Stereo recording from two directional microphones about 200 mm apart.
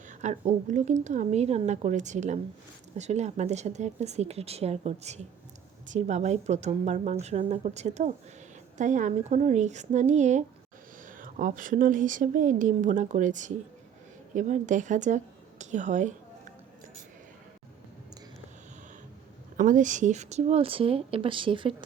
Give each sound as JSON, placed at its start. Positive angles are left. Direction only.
{"t": 0.1, "sound": "speech", "side_deg": -35}
{"t": 19.5, "sound": "speech", "side_deg": -40}